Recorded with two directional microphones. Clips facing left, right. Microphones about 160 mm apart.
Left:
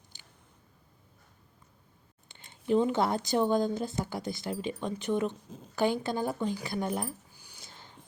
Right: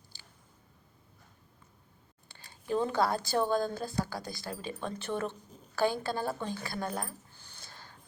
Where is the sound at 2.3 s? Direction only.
20° left (ahead or behind).